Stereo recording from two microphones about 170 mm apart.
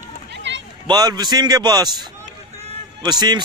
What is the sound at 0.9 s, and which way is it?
A man's voice, 25° right (ahead or behind).